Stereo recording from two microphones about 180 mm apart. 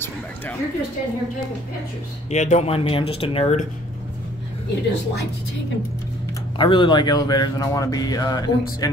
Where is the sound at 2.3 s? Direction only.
40° left (ahead or behind).